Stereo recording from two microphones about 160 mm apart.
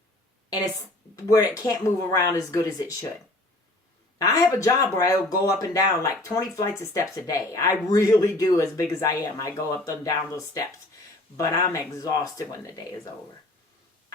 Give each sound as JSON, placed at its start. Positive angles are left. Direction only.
{"t": 0.5, "sound": "speech", "side_deg": 20}
{"t": 4.2, "sound": "speech", "side_deg": 20}